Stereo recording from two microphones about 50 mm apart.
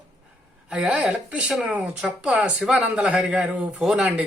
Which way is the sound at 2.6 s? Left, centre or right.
Centre.